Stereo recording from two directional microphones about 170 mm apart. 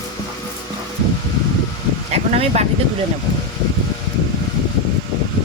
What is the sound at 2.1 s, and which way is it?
Speech, 40° right (ahead or behind).